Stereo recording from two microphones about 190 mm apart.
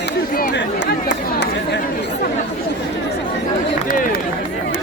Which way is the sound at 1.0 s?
70° left (ahead or behind).